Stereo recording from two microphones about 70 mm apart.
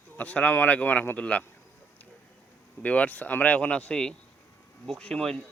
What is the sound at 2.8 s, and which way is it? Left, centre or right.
A man's voice, centre.